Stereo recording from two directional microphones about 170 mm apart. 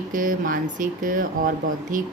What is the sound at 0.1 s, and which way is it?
A woman's voice, 50° right (ahead or behind).